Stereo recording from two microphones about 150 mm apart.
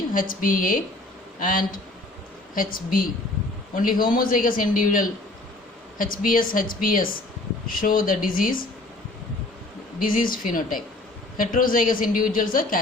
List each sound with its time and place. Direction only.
0.1 s a woman's voice: 65° left (ahead or behind)
10.0 s a woman's voice: 70° left (ahead or behind)